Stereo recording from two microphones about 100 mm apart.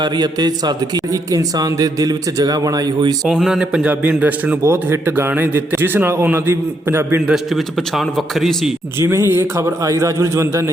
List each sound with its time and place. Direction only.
0.0 s a man's voice: 40° right (ahead or behind)
3.2 s a man's voice: 5° right (ahead or behind); by 7.2 s 25° right (ahead or behind)
7.3 s a man's voice: 5° right (ahead or behind)
9.0 s a man's voice: 25° right (ahead or behind)